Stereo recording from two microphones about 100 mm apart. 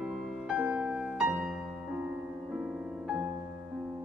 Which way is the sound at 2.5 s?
15° right (ahead or behind).